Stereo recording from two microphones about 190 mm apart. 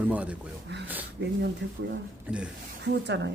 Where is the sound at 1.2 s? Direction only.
70° right (ahead or behind).